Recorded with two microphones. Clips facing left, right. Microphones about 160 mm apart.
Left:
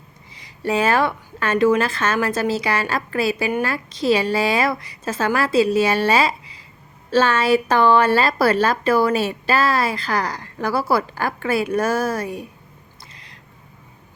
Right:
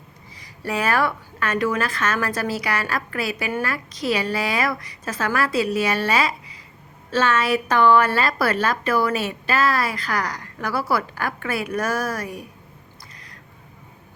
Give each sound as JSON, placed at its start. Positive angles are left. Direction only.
{"t": 0.3, "sound": "a woman's voice", "side_deg": 25}